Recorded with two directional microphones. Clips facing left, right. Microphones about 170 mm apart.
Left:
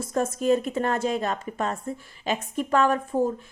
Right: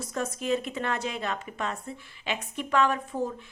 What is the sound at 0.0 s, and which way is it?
A woman's voice, 50° left (ahead or behind).